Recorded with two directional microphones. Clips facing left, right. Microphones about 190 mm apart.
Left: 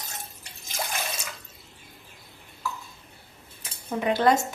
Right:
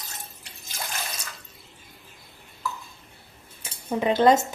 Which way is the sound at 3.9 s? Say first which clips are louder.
Right 3 dB; 20° right (ahead or behind).